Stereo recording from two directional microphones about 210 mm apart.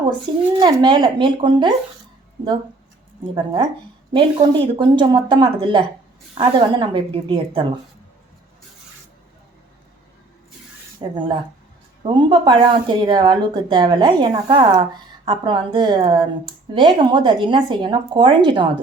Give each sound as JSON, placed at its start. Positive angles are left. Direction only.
{"t": 0.3, "sound": "a woman's voice", "side_deg": -25}
{"t": 3.3, "sound": "a woman's voice", "side_deg": -20}
{"t": 11.0, "sound": "a woman's voice", "side_deg": -20}